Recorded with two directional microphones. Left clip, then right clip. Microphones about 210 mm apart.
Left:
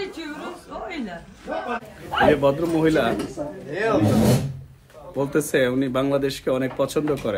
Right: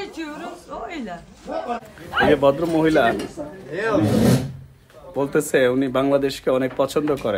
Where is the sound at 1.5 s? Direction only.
35° right (ahead or behind).